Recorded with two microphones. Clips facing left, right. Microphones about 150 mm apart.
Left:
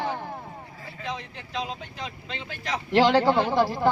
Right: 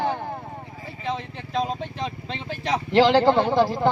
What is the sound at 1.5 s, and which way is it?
Speech, 45° right (ahead or behind).